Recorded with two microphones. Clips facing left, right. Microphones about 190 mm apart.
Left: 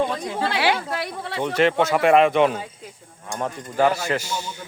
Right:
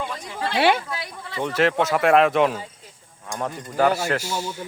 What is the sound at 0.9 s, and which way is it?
Speech, 60° left (ahead or behind).